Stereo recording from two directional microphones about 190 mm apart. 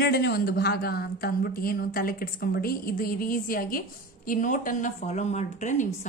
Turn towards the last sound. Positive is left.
turn(degrees=40)  # may be behind; listen again after turning